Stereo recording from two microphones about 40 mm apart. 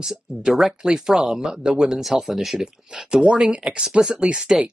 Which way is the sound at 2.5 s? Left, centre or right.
Right.